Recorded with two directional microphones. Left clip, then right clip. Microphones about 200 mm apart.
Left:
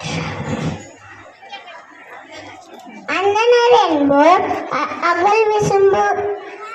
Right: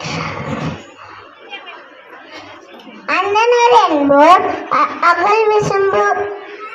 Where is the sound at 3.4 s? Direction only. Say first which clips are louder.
Right 1 dB; 20° right (ahead or behind).